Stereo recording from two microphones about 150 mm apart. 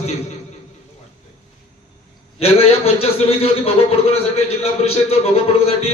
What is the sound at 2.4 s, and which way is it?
A man's voice, 40° left (ahead or behind).